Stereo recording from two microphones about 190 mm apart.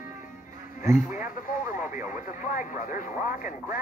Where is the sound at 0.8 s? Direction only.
10° right (ahead or behind).